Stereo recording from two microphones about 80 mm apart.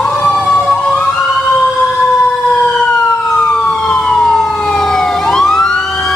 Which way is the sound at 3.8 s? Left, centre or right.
Centre.